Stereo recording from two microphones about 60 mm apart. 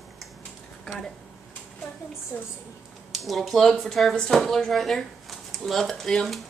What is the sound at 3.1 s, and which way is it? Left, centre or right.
Speech, centre.